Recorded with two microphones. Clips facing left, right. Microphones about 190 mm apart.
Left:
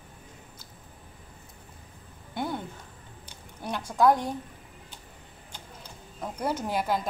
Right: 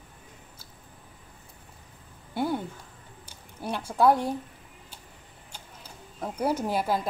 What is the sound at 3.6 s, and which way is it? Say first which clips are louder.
Speech: even; 5° right (ahead or behind).